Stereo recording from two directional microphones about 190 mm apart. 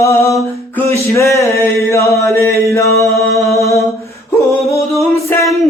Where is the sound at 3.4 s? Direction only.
15° left (ahead or behind).